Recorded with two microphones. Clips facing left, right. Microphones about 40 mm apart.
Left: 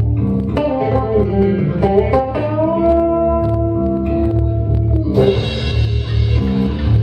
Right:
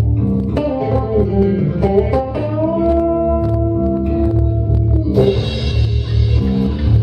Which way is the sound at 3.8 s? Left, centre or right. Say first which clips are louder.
Even; centre.